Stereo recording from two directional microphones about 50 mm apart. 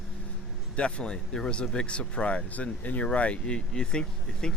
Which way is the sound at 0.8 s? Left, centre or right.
Left.